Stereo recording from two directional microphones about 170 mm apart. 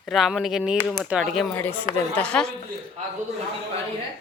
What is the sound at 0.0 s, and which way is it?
Speech, centre (ahead or behind).